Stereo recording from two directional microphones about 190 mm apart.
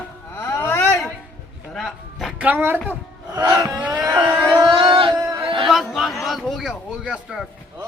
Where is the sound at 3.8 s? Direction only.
5° right (ahead or behind).